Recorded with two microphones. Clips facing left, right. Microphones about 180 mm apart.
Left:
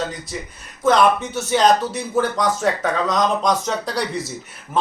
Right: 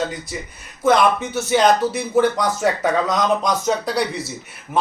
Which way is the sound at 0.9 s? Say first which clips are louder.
Even; 10° right (ahead or behind).